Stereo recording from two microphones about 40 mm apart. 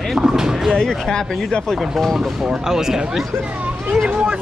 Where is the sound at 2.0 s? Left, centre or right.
Centre.